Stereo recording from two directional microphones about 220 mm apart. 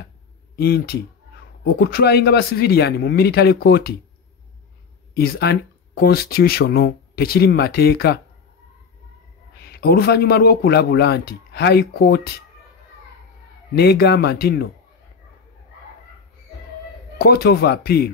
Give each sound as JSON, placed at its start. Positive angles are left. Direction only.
{"t": 0.6, "sound": "speech", "side_deg": 45}
{"t": 5.1, "sound": "speech", "side_deg": 45}
{"t": 9.6, "sound": "speech", "side_deg": 45}
{"t": 13.7, "sound": "speech", "side_deg": 45}
{"t": 17.2, "sound": "speech", "side_deg": 45}